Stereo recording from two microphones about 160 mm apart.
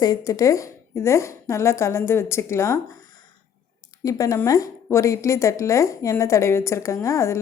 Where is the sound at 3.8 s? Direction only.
20° left (ahead or behind).